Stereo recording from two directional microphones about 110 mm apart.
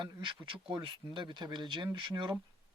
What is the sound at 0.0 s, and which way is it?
Speech, 45° right (ahead or behind).